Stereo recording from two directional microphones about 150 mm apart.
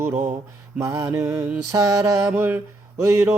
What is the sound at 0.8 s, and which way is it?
Mantra, 20° right (ahead or behind).